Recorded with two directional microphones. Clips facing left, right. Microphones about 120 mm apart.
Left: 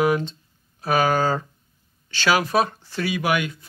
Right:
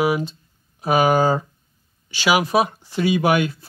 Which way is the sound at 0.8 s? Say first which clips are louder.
Right 3 dB; 15° right (ahead or behind).